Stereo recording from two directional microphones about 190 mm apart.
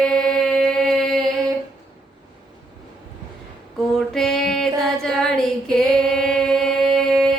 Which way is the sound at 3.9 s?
5° left (ahead or behind).